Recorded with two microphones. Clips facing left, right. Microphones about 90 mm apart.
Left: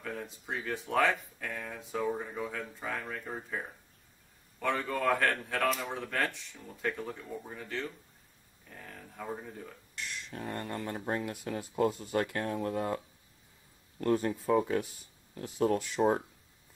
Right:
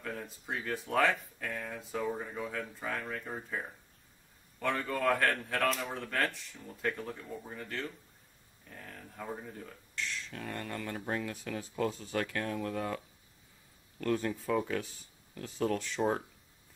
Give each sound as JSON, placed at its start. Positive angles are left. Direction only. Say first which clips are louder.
{"t": 0.0, "sound": "speech", "louder": "left 1 dB", "side_deg": 0}
{"t": 10.3, "sound": "speech", "louder": "left 6 dB", "side_deg": 25}
{"t": 15.8, "sound": "speech", "louder": "left 4 dB", "side_deg": 10}